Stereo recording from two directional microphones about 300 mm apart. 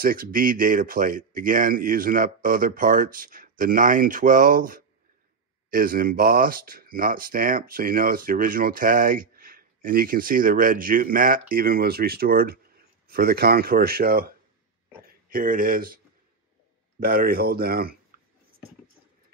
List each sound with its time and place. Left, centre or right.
0.0 s speech: right
17.0 s speech: right